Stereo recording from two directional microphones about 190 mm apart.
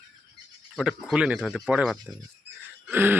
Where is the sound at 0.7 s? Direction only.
5° right (ahead or behind).